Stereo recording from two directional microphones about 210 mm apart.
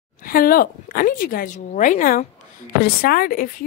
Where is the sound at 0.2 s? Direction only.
45° left (ahead or behind).